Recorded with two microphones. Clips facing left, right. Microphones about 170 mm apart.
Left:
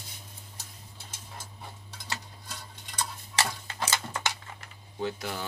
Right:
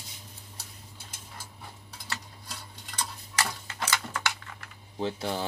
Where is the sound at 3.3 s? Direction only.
25° left (ahead or behind).